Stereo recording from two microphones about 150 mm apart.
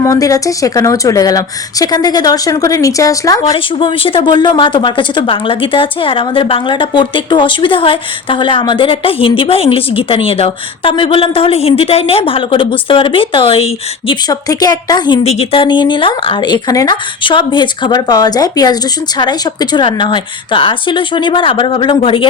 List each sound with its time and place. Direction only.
0.0 s speech: 20° left (ahead or behind)
3.8 s a woman's voice: 35° left (ahead or behind)
14.1 s speech: 25° left (ahead or behind)
15.2 s a woman's voice: 45° left (ahead or behind)
15.6 s a woman's voice: 30° left (ahead or behind)